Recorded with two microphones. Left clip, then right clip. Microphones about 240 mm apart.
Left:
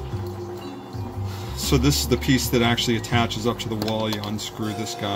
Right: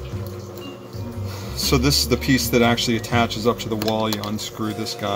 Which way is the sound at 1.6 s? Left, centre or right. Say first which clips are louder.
Right 3 dB; centre.